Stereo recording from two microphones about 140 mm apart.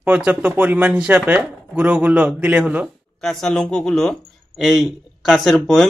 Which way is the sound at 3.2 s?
Centre (ahead or behind).